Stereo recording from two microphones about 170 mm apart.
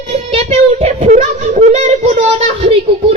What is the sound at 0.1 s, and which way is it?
Child singing, 40° right (ahead or behind).